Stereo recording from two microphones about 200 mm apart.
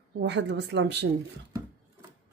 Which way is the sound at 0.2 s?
60° right (ahead or behind).